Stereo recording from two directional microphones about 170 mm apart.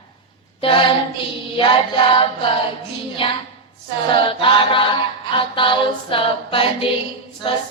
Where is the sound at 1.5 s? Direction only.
30° left (ahead or behind).